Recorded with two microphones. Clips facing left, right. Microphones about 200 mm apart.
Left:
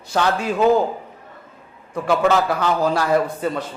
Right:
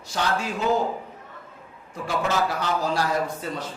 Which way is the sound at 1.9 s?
65° left (ahead or behind).